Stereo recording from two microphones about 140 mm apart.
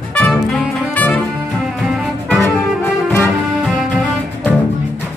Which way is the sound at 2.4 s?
15° left (ahead or behind).